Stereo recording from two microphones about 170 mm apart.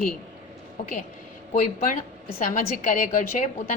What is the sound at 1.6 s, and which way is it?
A woman's voice, 50° left (ahead or behind).